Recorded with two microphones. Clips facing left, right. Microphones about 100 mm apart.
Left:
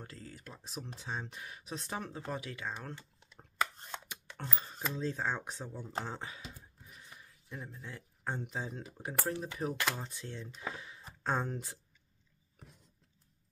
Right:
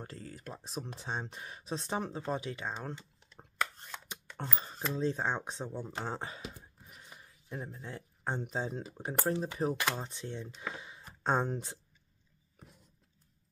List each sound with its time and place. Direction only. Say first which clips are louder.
0.0 s speech: right 4 dB; 35° right (ahead or behind); by 3.1 s 20° right (ahead or behind)
4.6 s speech: right 4 dB; 20° right (ahead or behind)
7.4 s speech: right 4 dB; 40° right (ahead or behind)